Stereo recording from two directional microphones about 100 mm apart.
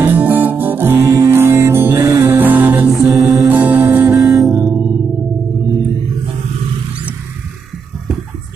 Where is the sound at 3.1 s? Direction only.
35° right (ahead or behind).